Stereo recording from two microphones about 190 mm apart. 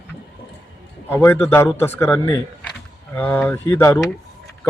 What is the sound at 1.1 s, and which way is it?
Speech, 10° left (ahead or behind).